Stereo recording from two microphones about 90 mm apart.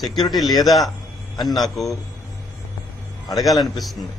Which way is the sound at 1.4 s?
Centre (ahead or behind).